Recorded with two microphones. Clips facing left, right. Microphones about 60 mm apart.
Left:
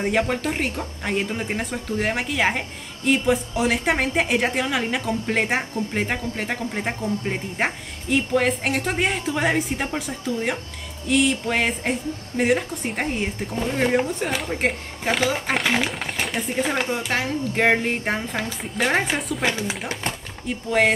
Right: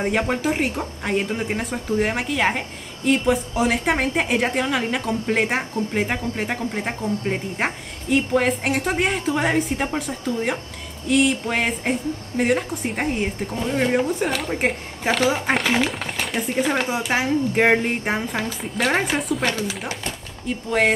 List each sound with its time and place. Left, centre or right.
0.0 s a woman's voice: centre
19.9 s speech: left
20.4 s a woman's voice: centre